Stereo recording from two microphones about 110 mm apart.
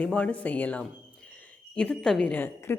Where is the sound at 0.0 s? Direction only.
10° left (ahead or behind).